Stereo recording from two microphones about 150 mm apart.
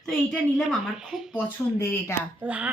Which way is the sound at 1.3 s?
20° left (ahead or behind).